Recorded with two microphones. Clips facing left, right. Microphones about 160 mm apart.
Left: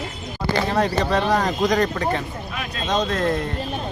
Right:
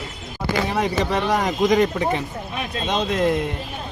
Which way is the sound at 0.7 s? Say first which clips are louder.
Left 2 dB; 15° right (ahead or behind).